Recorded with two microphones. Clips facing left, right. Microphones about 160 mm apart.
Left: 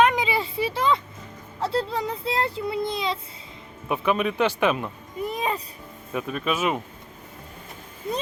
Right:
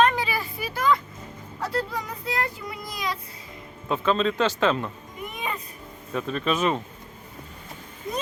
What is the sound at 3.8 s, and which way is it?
Speech, 15° left (ahead or behind).